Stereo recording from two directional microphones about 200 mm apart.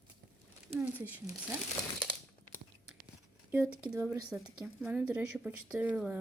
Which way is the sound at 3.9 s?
15° right (ahead or behind).